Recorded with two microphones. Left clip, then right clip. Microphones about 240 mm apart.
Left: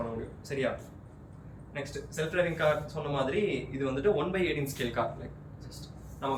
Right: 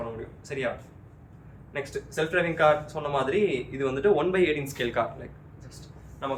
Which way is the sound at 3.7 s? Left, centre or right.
Centre.